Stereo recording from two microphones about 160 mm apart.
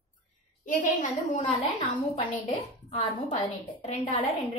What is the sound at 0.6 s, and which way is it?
Speech, 55° left (ahead or behind).